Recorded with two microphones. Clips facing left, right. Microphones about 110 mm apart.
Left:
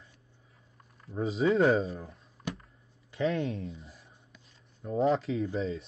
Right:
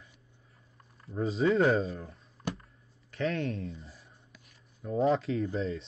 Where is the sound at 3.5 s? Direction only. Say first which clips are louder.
Even; centre (ahead or behind).